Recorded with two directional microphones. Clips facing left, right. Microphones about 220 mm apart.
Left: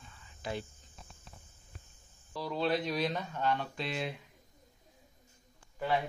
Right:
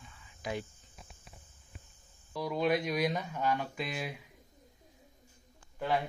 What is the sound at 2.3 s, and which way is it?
Speech, 10° right (ahead or behind).